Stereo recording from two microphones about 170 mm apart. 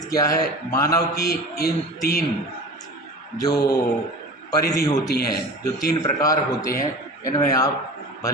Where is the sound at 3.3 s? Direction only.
20° left (ahead or behind).